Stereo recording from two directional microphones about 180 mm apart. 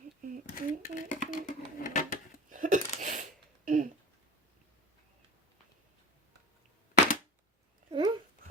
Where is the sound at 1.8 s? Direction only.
50° left (ahead or behind).